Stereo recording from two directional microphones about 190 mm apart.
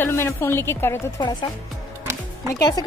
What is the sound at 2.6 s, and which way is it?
Speech, 20° left (ahead or behind).